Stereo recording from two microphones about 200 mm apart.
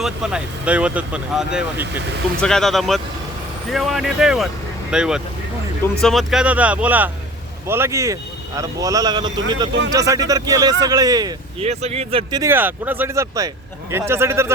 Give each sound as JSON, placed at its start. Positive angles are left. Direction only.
{"t": 0.0, "sound": "speech", "side_deg": -5}
{"t": 11.6, "sound": "speech", "side_deg": -30}
{"t": 12.4, "sound": "speech", "side_deg": -10}